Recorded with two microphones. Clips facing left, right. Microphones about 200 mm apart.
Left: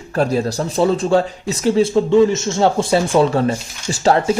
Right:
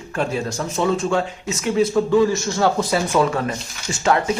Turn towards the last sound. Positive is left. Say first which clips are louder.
# left 4 dB
turn(degrees=35)  # may be behind; listen again after turning